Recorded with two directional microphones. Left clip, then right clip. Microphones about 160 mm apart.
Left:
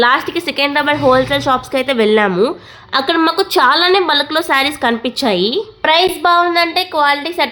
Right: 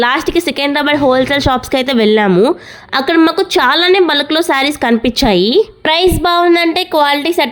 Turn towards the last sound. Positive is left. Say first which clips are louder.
# right 2 dB
turn(degrees=-50)  # may be behind; listen again after turning